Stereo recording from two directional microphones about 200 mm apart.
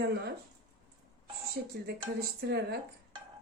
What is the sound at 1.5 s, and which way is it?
Speech, 50° right (ahead or behind).